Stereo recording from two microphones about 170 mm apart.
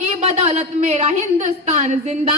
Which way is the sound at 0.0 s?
40° right (ahead or behind).